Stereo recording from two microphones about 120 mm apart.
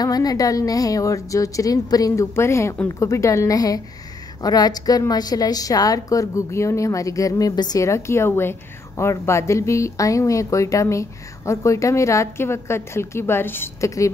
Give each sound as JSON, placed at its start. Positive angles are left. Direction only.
{"t": 0.0, "sound": "a woman's voice", "side_deg": 30}